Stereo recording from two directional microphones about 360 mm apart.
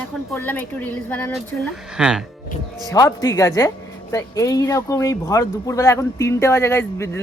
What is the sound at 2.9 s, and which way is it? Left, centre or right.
Speech, centre.